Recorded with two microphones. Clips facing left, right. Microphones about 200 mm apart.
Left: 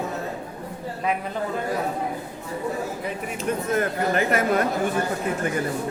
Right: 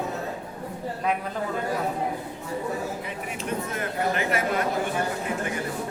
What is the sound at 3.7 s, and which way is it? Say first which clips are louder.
Speech: left 6 dB; 45° left (ahead or behind).